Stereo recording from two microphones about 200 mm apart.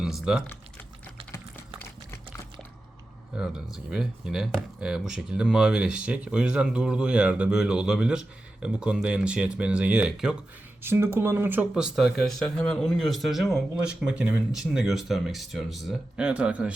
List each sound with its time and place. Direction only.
0.0 s speech: centre (ahead or behind)
3.3 s speech: 5° right (ahead or behind)